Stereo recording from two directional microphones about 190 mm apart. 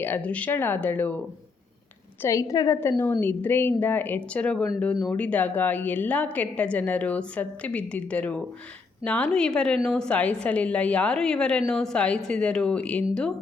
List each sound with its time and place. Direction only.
0.0 s speech: 10° left (ahead or behind)
2.2 s a woman's voice: 15° left (ahead or behind)